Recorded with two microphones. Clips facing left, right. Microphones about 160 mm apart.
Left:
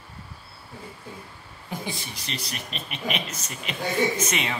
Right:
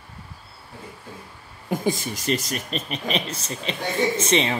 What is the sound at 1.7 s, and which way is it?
A woman's voice, 45° right (ahead or behind).